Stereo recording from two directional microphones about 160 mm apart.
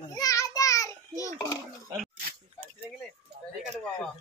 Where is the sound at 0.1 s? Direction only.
20° left (ahead or behind).